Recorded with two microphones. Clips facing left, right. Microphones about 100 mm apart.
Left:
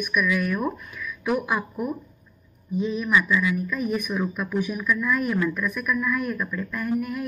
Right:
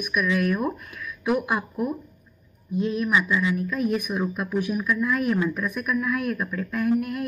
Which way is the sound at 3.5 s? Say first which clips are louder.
Right 1 dB; centre (ahead or behind).